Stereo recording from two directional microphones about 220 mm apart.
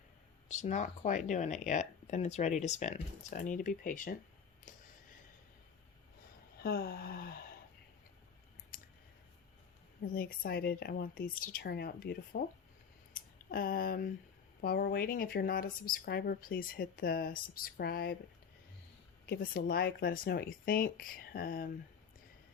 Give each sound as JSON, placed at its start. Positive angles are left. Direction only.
{"t": 0.4, "sound": "speech", "side_deg": 35}
{"t": 4.7, "sound": "a sound", "side_deg": 35}
{"t": 6.6, "sound": "a sound", "side_deg": 45}
{"t": 8.7, "sound": "clicking", "side_deg": 40}
{"t": 10.2, "sound": "speech", "side_deg": 40}
{"t": 19.2, "sound": "speech", "side_deg": 45}